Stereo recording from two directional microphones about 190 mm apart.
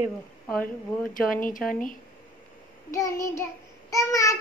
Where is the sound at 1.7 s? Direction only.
45° left (ahead or behind).